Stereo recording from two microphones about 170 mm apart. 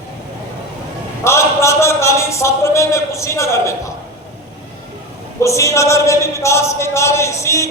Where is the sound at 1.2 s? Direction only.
15° left (ahead or behind).